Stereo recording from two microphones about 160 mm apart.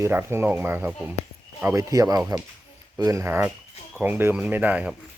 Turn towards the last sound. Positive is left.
turn(degrees=-10)  # may be behind; listen again after turning